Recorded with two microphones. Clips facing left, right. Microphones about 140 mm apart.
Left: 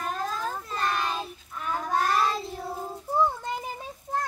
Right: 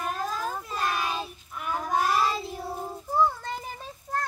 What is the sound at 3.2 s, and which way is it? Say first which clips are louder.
Music: right 1 dB; 15° left (ahead or behind).